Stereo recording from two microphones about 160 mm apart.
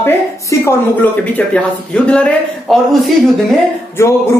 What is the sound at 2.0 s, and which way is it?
Speech, 5° left (ahead or behind).